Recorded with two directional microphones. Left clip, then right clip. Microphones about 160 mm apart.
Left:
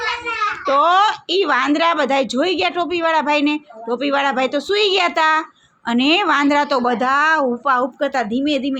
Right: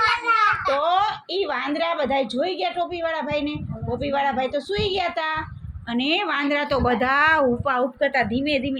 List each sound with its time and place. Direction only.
0.8 s a woman's voice: 65° left (ahead or behind); by 7.9 s 25° left (ahead or behind)
8.0 s speech: 40° left (ahead or behind)